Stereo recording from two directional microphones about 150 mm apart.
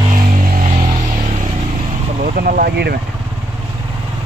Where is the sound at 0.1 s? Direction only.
65° right (ahead or behind).